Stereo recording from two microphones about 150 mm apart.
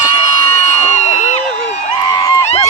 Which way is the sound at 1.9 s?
25° left (ahead or behind).